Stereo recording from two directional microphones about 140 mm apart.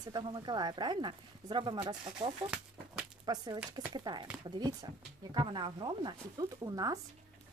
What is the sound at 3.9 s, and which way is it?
Speech, 30° right (ahead or behind).